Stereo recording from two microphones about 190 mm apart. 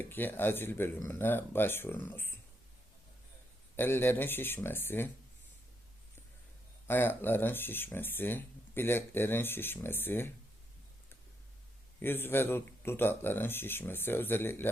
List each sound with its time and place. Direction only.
0.0 s speech: 10° left (ahead or behind)
3.8 s speech: 10° left (ahead or behind)
6.8 s speech: 10° left (ahead or behind)
11.9 s speech: 10° left (ahead or behind)